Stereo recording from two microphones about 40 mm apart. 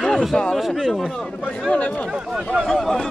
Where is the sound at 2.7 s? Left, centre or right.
Centre.